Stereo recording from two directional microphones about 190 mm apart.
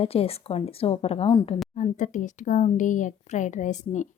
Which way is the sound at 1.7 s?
40° left (ahead or behind).